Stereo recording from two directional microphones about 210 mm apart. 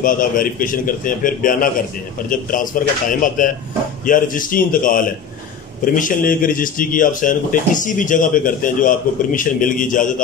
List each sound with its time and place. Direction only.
0.0 s speech: 40° left (ahead or behind)